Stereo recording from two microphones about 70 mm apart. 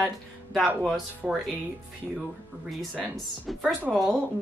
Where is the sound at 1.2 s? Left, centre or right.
Centre.